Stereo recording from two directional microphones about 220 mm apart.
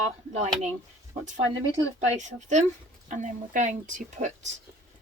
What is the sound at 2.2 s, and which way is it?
Speech, 35° right (ahead or behind).